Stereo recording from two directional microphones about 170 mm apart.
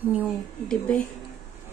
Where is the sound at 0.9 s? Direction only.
5° left (ahead or behind).